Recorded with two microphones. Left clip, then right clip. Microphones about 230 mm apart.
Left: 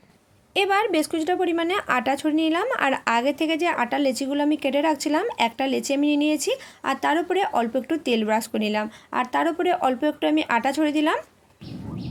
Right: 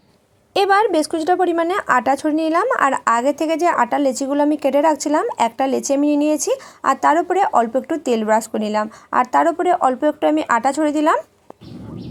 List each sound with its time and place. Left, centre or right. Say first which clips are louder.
0.5 s a woman's voice: right 6 dB; right
1.6 s a woman's voice: right 6 dB; centre
9.6 s a woman's voice: right 6 dB; centre